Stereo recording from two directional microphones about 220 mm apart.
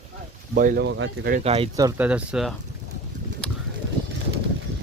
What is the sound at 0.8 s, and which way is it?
Speech, 55° right (ahead or behind).